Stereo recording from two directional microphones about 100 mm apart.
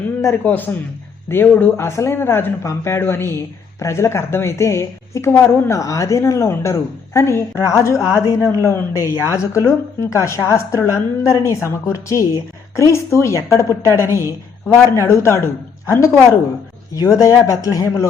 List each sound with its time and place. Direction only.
0.4 s a man's voice: 20° left (ahead or behind)